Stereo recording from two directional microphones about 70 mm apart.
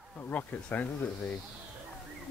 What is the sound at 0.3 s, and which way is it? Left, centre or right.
Speech, left.